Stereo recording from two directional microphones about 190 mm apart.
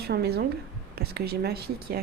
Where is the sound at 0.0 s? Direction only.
60° right (ahead or behind).